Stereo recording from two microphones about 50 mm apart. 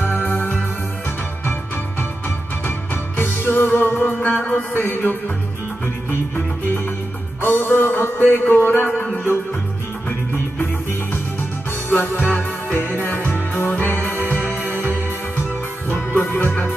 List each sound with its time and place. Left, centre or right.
0.0 s music: left
3.2 s music: left
4.2 s music: left
7.4 s music: left
10.0 s music: left
11.9 s music: left